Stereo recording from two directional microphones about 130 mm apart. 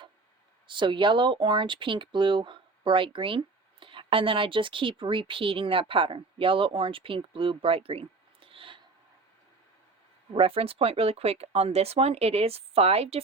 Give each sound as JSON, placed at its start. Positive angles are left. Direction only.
{"t": 0.7, "sound": "speech", "side_deg": -40}
{"t": 10.3, "sound": "speech", "side_deg": -45}